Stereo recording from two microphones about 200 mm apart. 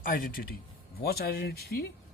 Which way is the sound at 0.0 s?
45° left (ahead or behind).